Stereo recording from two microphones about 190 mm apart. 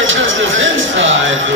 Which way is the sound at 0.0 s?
90° right.